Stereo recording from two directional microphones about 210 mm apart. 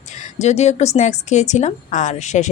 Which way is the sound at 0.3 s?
30° left (ahead or behind).